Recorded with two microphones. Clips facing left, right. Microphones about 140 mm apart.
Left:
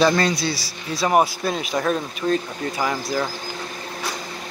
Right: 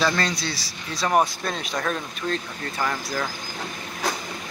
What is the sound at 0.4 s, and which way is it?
Speech, 5° left (ahead or behind).